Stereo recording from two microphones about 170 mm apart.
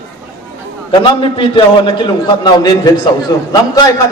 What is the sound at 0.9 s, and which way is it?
A man's voice, 30° left (ahead or behind).